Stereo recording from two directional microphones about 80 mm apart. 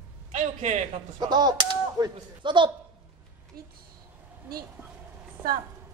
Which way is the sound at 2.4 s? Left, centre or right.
Right.